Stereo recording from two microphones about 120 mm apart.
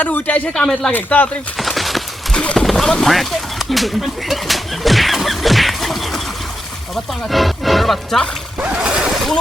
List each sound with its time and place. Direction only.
0.0 s speech: 15° left (ahead or behind)
1.5 s speech: centre (ahead or behind)
8.5 s splash: 10° right (ahead or behind)